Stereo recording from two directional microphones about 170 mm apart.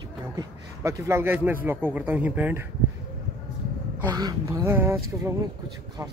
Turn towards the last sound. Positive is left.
turn(degrees=-20)  # may be behind; listen again after turning